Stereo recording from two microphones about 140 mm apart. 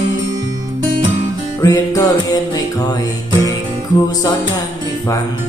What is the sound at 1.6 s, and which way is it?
Music, 25° left (ahead or behind).